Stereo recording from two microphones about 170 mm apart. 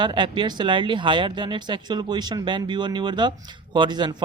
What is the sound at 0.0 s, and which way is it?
Speech, 30° right (ahead or behind).